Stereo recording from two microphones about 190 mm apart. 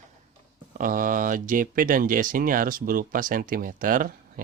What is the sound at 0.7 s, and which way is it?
Speech, 45° right (ahead or behind).